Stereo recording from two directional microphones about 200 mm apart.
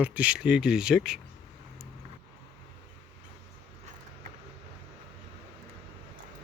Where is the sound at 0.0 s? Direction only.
5° right (ahead or behind).